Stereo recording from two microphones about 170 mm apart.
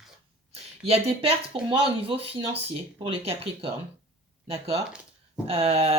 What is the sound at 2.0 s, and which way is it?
Speech, 35° right (ahead or behind).